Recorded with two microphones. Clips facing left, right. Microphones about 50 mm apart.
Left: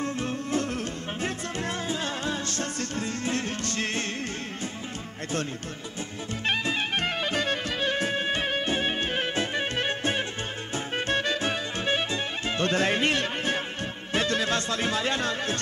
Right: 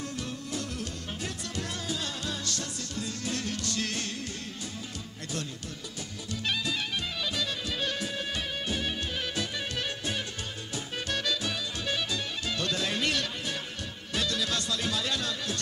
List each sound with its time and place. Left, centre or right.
0.0 s music: left
6.4 s music: left
14.1 s speech: left